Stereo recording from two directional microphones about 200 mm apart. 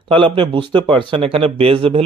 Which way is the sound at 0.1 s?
25° right (ahead or behind).